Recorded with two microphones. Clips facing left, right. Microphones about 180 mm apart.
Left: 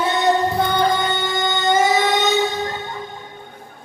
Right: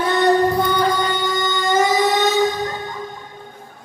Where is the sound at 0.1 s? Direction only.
20° left (ahead or behind).